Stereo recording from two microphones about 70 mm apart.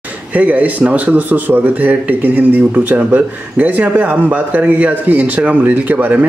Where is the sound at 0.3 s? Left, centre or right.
Right.